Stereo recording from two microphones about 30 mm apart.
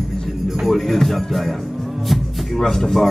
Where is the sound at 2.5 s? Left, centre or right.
Centre.